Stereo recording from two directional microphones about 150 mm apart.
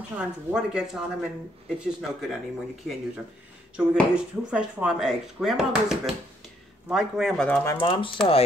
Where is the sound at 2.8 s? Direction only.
Centre (ahead or behind).